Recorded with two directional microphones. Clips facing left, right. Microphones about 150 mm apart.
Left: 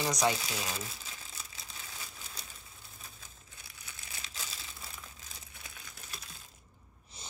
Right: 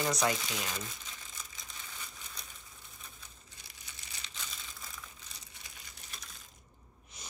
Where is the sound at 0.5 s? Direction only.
35° left (ahead or behind).